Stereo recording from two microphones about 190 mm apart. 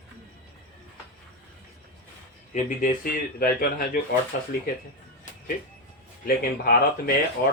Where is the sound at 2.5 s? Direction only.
45° left (ahead or behind).